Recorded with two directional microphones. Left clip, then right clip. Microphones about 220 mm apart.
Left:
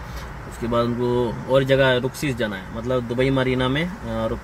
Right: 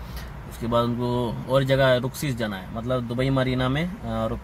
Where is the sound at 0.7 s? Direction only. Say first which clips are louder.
Left 2 dB; 20° right (ahead or behind).